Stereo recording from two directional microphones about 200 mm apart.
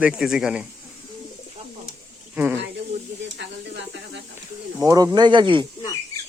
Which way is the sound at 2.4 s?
15° right (ahead or behind).